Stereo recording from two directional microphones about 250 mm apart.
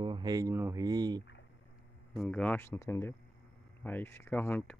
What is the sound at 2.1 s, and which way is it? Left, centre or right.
Speech, centre.